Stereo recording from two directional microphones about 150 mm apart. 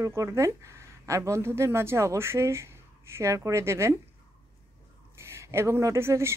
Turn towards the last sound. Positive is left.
turn(degrees=-15)  # may be behind; listen again after turning